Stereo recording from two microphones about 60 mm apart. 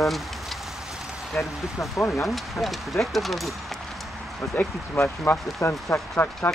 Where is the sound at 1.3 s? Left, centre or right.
Left.